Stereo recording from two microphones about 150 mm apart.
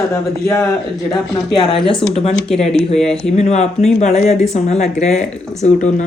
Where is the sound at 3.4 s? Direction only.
50° left (ahead or behind).